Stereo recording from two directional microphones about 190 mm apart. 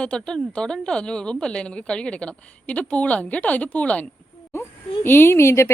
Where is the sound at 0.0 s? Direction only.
5° left (ahead or behind).